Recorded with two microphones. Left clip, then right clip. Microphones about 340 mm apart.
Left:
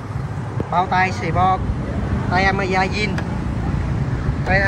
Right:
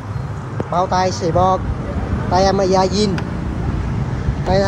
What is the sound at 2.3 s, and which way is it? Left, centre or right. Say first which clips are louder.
Speech: right 4 dB; centre.